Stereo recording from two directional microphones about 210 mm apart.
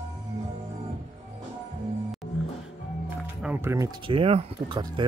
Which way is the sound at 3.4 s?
10° right (ahead or behind).